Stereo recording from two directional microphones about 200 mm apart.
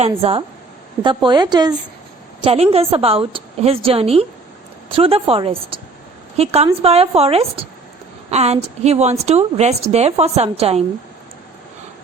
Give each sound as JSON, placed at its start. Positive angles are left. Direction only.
{"t": 0.0, "sound": "a woman's voice", "side_deg": -30}